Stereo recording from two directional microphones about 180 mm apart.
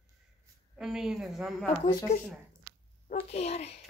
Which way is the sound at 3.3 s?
35° left (ahead or behind).